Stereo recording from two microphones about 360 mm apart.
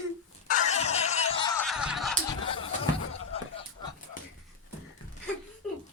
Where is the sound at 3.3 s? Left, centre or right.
Centre.